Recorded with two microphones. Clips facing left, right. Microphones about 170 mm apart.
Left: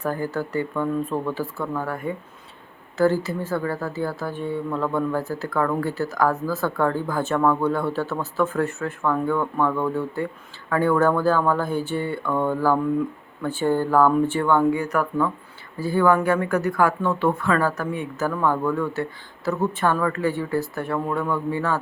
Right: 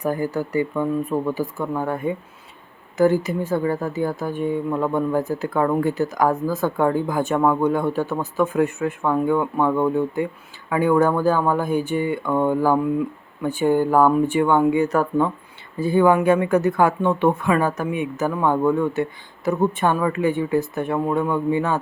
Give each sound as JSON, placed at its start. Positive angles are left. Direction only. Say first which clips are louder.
{"t": 0.0, "sound": "speech", "louder": "right 3 dB", "side_deg": -15}